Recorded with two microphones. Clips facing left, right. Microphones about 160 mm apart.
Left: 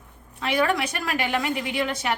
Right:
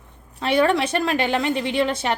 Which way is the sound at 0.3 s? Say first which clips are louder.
Right 5 dB; 30° right (ahead or behind).